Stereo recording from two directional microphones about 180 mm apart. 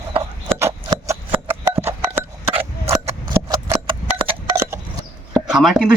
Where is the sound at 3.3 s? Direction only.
15° right (ahead or behind).